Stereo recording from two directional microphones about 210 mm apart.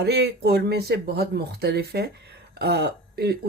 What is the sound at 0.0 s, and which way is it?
Speech, 50° right (ahead or behind).